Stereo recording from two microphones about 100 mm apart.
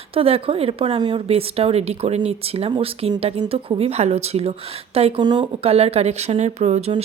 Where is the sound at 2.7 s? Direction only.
70° right (ahead or behind); by 5.1 s 90° right.